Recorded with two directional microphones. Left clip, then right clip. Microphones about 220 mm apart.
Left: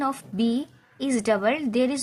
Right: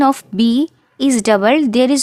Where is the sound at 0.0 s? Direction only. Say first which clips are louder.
Right 12 dB; 55° right (ahead or behind).